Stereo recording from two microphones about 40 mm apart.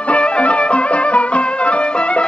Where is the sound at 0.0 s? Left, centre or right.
Left.